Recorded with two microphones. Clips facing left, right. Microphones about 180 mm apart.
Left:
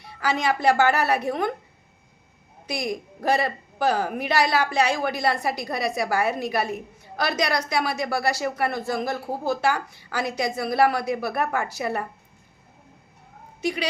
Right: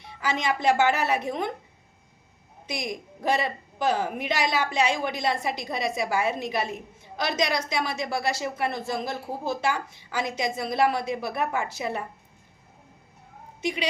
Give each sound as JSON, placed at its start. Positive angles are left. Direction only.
{"t": 0.0, "sound": "a woman's voice", "side_deg": -20}
{"t": 2.6, "sound": "a woman's voice", "side_deg": -20}
{"t": 13.6, "sound": "a woman's voice", "side_deg": -20}